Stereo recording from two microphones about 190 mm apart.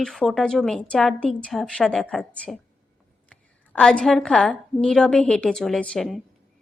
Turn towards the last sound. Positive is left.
turn(degrees=0)  # may be behind; listen again after turning